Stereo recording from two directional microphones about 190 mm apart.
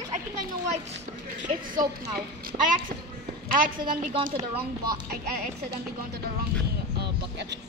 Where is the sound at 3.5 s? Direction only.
50° right (ahead or behind).